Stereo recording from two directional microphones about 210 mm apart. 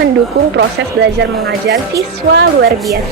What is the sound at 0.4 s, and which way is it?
A woman's voice, 55° right (ahead or behind).